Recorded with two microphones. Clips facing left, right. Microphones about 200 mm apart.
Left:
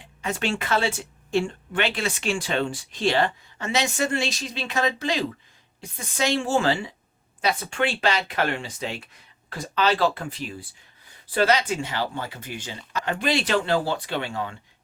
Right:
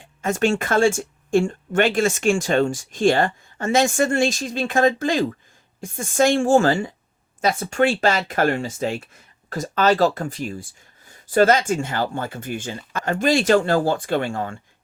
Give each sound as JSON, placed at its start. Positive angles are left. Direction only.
{"t": 0.0, "sound": "speech", "side_deg": -45}